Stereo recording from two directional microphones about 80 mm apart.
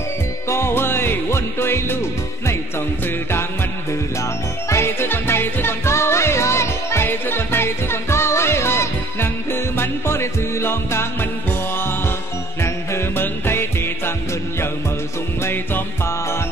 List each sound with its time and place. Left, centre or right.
0.5 s music: left
4.2 s music: left
12.6 s music: left
15.4 s music: left